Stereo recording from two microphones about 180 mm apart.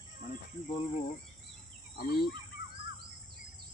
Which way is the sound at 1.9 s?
55° left (ahead or behind).